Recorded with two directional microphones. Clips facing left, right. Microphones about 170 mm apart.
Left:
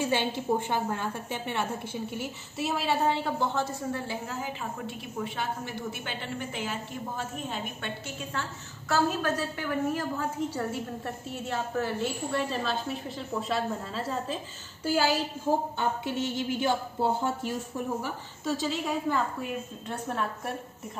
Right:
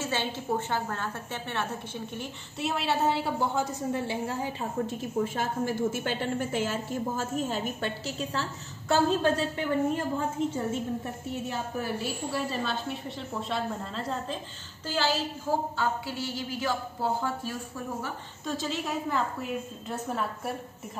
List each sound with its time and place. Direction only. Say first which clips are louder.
0.0 s a woman's voice: left 3 dB; 15° left (ahead or behind)
2.1 s a woman's voice: left 3 dB; centre (ahead or behind)
3.9 s a woman's voice: right 3 dB; 25° right (ahead or behind); by 7.9 s 45° right (ahead or behind)
8.4 s a woman's voice: right 2 dB; 30° right (ahead or behind); by 17.8 s 25° left (ahead or behind)
18.0 s a woman's voice: left 3 dB; 5° left (ahead or behind)